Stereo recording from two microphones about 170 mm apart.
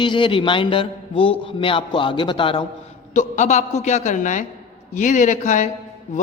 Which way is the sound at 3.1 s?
45° left (ahead or behind).